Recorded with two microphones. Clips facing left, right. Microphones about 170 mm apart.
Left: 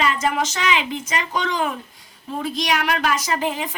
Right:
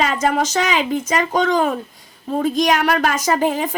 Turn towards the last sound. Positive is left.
turn(degrees=-45)  # may be behind; listen again after turning